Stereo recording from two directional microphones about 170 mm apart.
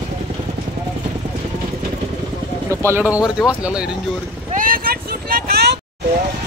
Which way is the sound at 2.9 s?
10° right (ahead or behind).